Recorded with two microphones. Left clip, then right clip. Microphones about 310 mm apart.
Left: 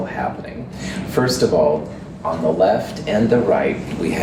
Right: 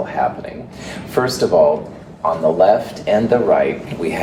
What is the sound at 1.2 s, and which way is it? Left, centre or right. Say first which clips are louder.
Speech: right 1 dB; right.